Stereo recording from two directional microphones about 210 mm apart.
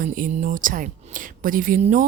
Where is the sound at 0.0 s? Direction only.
40° right (ahead or behind).